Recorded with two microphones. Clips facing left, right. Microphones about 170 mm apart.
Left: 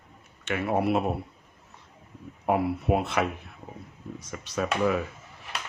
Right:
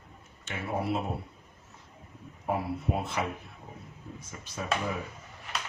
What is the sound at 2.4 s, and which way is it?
Speech, 70° left (ahead or behind).